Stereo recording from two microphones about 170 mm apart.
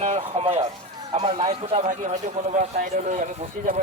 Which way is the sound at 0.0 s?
40° right (ahead or behind).